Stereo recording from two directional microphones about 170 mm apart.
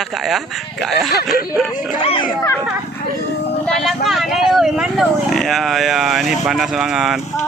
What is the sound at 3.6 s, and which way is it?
Speech, centre (ahead or behind).